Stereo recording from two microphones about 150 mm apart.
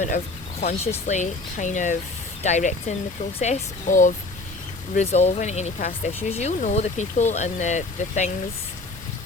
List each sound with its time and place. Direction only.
0.6 s speech: 50° left (ahead or behind)